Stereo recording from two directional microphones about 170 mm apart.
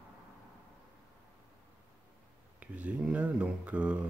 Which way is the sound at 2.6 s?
10° right (ahead or behind).